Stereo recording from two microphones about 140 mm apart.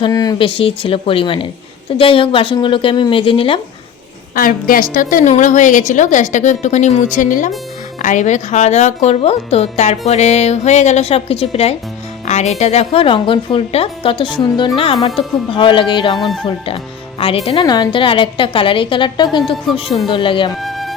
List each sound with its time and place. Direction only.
0.0 s a sound: 25° left (ahead or behind)
0.3 s a woman's voice: 40° left (ahead or behind)
4.4 s a woman's voice: 85° left
5.3 s a woman's voice: 65° left (ahead or behind); by 20.5 s 35° left (ahead or behind)
20.6 s music: centre (ahead or behind)